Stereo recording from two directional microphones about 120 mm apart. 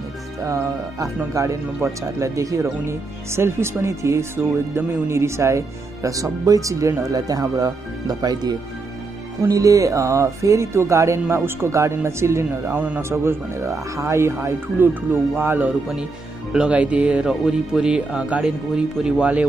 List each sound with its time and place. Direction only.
0.5 s speech: 25° right (ahead or behind); by 19.4 s 10° right (ahead or behind)